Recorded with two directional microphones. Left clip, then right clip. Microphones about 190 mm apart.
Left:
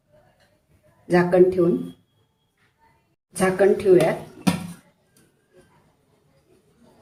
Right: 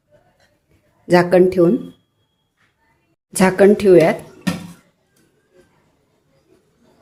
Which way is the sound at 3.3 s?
60° right (ahead or behind).